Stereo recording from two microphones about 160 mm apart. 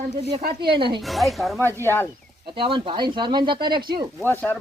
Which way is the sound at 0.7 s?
30° right (ahead or behind).